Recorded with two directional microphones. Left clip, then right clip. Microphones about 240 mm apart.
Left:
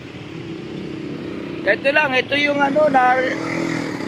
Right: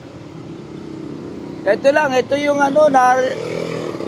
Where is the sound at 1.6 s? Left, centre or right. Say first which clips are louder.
Right 3 dB; centre.